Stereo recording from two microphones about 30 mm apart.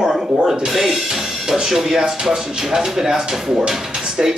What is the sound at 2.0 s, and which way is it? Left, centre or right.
Speech, right.